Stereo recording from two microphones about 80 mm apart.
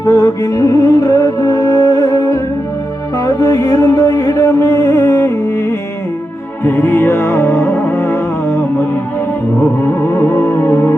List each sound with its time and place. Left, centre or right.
0.0 s music: left
6.7 s music: left
9.8 s music: left